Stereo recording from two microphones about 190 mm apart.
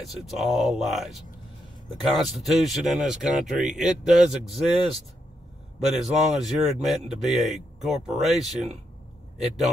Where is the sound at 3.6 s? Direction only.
40° right (ahead or behind).